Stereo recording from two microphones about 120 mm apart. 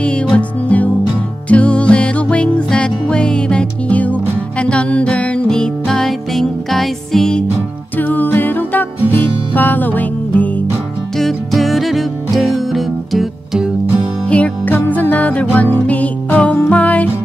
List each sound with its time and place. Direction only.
0.0 s music: 10° left (ahead or behind)
8.0 s music: 15° left (ahead or behind)
11.1 s music: centre (ahead or behind)
14.3 s music: 10° left (ahead or behind)